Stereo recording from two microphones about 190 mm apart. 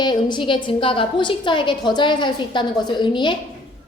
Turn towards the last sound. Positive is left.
turn(degrees=25)  # may be behind; listen again after turning